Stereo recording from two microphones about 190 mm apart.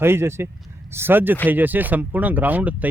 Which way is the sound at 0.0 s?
15° right (ahead or behind).